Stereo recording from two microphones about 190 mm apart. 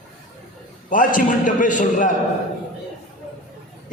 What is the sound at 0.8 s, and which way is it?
A man's voice, 45° left (ahead or behind).